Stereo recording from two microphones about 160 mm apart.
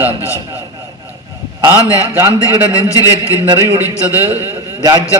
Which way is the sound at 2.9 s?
20° left (ahead or behind).